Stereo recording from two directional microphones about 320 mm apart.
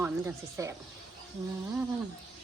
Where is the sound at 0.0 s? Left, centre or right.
Centre.